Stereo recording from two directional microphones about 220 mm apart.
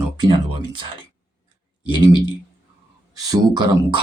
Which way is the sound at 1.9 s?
20° right (ahead or behind).